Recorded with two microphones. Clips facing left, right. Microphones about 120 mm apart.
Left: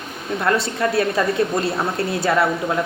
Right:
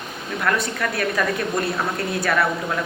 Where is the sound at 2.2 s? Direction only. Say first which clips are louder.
Left 3 dB; 25° left (ahead or behind).